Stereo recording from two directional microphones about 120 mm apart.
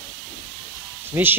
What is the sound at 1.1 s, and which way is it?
Speech, 20° right (ahead or behind).